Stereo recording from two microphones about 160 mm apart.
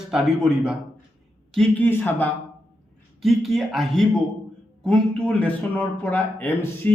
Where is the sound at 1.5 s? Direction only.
5° left (ahead or behind).